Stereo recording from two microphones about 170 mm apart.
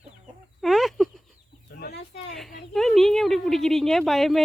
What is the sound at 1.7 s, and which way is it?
Chicken, 85° left.